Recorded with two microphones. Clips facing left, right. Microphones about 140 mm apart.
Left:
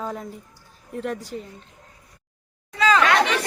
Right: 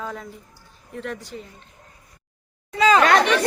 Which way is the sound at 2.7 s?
15° right (ahead or behind).